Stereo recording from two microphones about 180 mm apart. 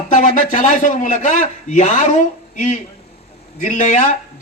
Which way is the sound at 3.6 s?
45° left (ahead or behind).